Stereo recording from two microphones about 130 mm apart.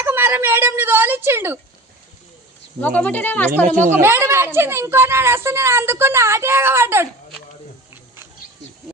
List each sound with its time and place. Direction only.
0.0 s a woman's voice: 15° right (ahead or behind)
2.8 s speech: 15° left (ahead or behind)
3.9 s a woman's voice: 20° right (ahead or behind)